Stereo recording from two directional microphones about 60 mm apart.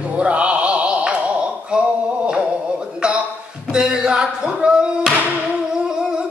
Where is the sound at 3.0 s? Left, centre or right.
Centre.